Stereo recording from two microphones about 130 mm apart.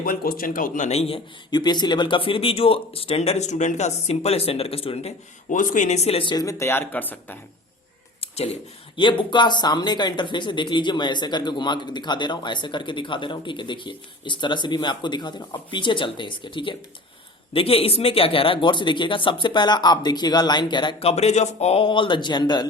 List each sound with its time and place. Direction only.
0.0 s speech: 90° left
0.9 s speech: 50° left (ahead or behind)
1.5 s speech: 35° left (ahead or behind)
5.5 s speech: 85° left; by 6.3 s 50° left (ahead or behind)
6.3 s speech: 25° left (ahead or behind)
9.0 s speech: 40° left (ahead or behind)
21.1 s speech: 55° left (ahead or behind); by 22.6 s 35° left (ahead or behind)